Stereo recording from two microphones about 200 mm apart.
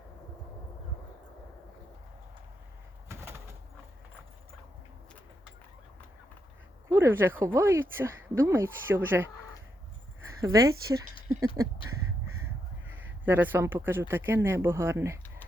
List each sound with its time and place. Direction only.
3.1 s bird: 15° right (ahead or behind)
6.8 s speech: 10° right (ahead or behind)
10.4 s speech: 15° right (ahead or behind)
12.9 s speech: 10° right (ahead or behind)